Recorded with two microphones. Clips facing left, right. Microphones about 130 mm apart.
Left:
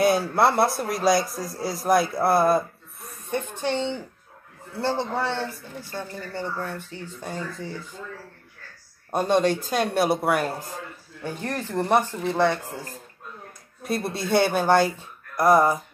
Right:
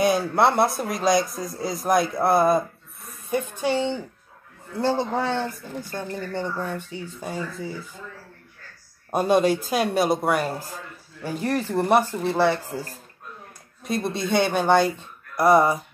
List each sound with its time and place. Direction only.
0.0 s a man's voice: centre (ahead or behind)
3.3 s speech: 10° right (ahead or behind)
9.1 s a man's voice: 5° right (ahead or behind)
11.2 s a man's voice: 10° right (ahead or behind)
13.8 s a man's voice: 5° left (ahead or behind)